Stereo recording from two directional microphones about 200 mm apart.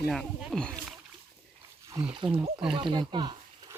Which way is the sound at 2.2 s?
Centre (ahead or behind).